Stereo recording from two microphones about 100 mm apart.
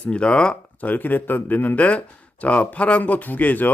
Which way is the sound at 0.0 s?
10° left (ahead or behind).